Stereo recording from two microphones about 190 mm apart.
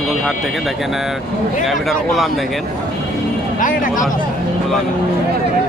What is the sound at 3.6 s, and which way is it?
Speech, 45° left (ahead or behind).